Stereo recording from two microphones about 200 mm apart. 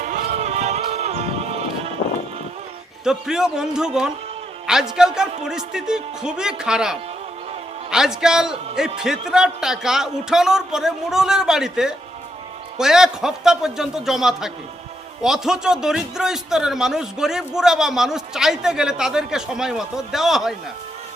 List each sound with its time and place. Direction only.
0.0 s music: 40° right (ahead or behind)
3.0 s a man's voice: 5° right (ahead or behind)